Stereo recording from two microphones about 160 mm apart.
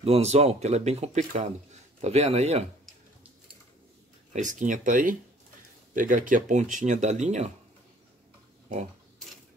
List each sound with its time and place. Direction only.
0.0 s a man's voice: 40° right (ahead or behind)
4.3 s speech: 50° right (ahead or behind)